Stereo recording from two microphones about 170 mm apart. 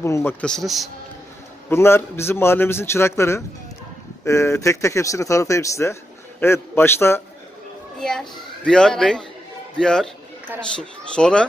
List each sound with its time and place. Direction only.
0.0 s a man's voice: 15° left (ahead or behind)
1.7 s a man's voice: 15° left (ahead or behind)
8.0 s a child's voice: 5° left (ahead or behind)